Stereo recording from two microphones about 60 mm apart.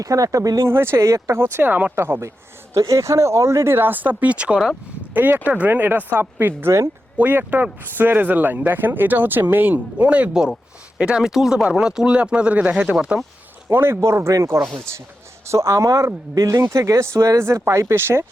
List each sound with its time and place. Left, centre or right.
0.0 s speech: right
0.6 s speech: right
2.0 s speech: right
2.7 s speech: right; by 4.6 s centre
5.1 s speech: right
10.4 s speech: centre
13.7 s speech: right